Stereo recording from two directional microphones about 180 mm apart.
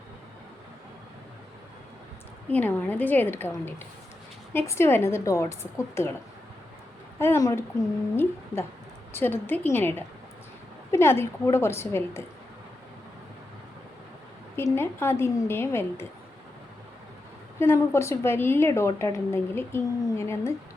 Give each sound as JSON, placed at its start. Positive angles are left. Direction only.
{"t": 2.5, "sound": "a woman's voice", "side_deg": 10}
{"t": 7.2, "sound": "a woman's voice", "side_deg": 15}
{"t": 14.5, "sound": "a woman's voice", "side_deg": 15}
{"t": 17.6, "sound": "a woman's voice", "side_deg": 15}